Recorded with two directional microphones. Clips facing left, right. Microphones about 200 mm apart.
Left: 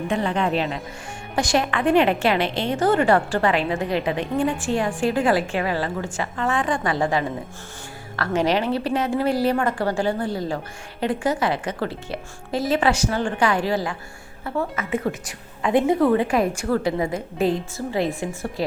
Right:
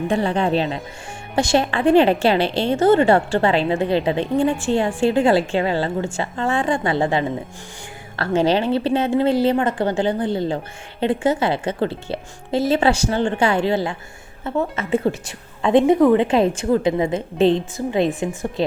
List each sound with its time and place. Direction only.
0.1 s a woman's voice: 30° right (ahead or behind)